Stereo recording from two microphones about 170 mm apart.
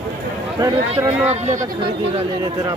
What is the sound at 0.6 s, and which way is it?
Speech, 20° right (ahead or behind).